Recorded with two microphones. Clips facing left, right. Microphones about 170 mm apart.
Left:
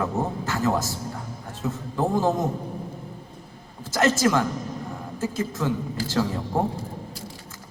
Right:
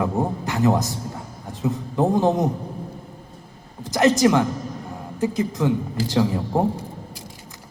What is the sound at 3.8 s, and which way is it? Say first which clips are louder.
A man's voice: right 4 dB; 15° right (ahead or behind).